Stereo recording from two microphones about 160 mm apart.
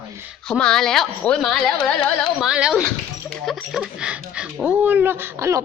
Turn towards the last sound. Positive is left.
turn(degrees=-15)  # may be behind; listen again after turning